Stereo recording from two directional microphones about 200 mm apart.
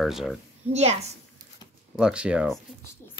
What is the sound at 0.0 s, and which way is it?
Speech, centre (ahead or behind).